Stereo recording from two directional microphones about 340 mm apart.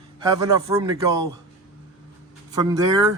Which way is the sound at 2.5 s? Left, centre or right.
Centre.